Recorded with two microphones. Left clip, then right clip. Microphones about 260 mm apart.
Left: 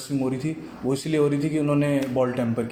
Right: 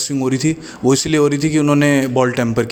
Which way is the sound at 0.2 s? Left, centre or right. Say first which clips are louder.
Right 9 dB; right.